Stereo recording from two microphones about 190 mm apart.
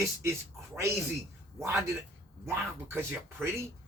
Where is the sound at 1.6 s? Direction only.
15° right (ahead or behind).